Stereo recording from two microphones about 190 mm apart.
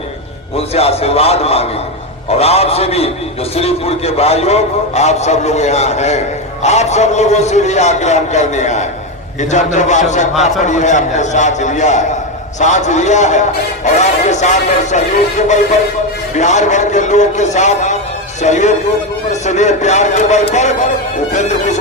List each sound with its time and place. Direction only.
0.5 s a man's voice: 30° left (ahead or behind)